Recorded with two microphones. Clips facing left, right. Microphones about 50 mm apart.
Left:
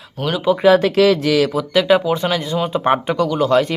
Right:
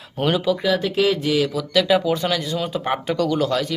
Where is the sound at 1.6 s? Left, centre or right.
Left.